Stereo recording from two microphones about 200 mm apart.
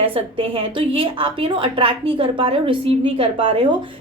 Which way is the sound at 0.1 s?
25° right (ahead or behind).